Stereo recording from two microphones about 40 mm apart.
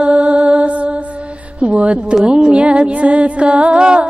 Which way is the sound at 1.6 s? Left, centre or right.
Right.